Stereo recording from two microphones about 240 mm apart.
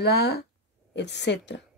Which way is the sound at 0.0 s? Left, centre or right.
Left.